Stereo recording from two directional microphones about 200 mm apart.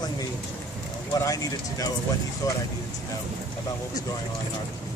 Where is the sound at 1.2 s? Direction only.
15° left (ahead or behind).